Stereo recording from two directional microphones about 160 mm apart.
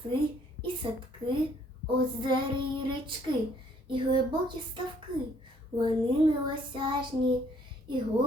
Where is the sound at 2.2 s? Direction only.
30° right (ahead or behind).